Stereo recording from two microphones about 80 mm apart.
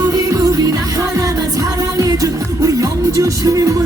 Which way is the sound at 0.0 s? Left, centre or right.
Right.